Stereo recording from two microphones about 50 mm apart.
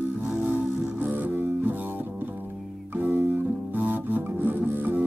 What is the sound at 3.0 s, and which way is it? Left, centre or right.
Music, right.